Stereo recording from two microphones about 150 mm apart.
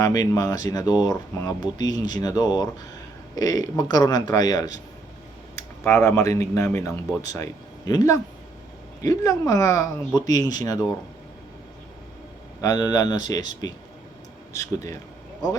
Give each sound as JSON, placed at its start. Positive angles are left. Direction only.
{"t": 0.0, "sound": "speech", "side_deg": 25}
{"t": 12.6, "sound": "speech", "side_deg": 25}